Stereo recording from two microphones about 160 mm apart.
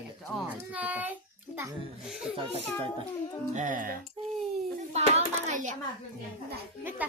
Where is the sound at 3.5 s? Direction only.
55° right (ahead or behind).